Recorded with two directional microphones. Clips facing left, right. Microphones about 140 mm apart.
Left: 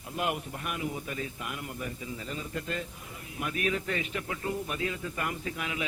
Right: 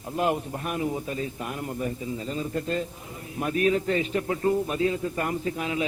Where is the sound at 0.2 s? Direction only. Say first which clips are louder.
Right 6 dB; 30° right (ahead or behind).